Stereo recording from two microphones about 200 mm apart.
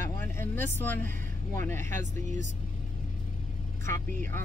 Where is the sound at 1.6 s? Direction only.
10° left (ahead or behind).